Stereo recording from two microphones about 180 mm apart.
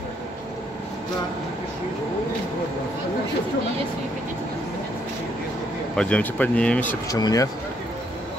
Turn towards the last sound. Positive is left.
turn(degrees=20)  # may be behind; listen again after turning